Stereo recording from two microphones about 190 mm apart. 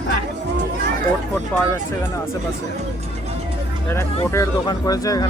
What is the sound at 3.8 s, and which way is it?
Speech, 15° left (ahead or behind).